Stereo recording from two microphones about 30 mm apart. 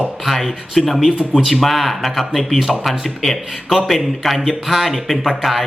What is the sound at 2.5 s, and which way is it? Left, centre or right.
A man's voice, centre.